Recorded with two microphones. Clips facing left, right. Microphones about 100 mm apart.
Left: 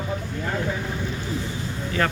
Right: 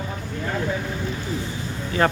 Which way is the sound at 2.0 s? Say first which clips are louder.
Right 4 dB; 25° right (ahead or behind).